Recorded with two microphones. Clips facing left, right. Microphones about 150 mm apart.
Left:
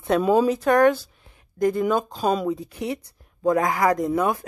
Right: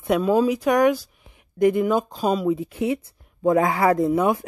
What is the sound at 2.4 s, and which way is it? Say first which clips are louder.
Speech: right 4 dB; 20° right (ahead or behind).